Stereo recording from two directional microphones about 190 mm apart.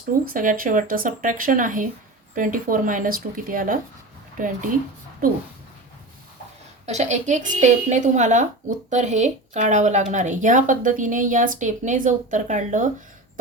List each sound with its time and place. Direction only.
0.3 s speech: 45° right (ahead or behind)
6.8 s a woman's voice: 35° right (ahead or behind)